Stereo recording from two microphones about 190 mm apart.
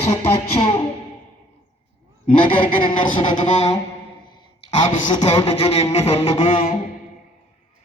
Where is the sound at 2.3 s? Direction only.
25° left (ahead or behind).